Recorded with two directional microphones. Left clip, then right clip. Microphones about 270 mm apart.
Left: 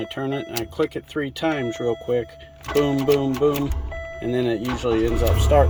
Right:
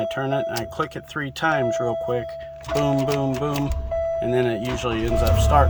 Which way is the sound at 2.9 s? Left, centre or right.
Right.